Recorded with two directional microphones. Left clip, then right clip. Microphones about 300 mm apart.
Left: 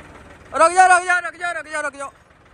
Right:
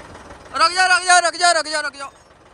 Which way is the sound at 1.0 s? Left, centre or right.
Right.